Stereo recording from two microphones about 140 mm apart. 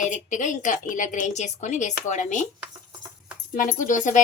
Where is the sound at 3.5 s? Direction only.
70° left (ahead or behind).